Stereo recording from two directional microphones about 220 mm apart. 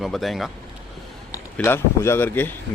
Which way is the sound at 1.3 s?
10° left (ahead or behind).